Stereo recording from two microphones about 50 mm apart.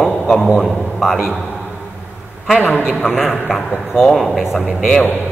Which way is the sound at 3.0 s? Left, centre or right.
Centre.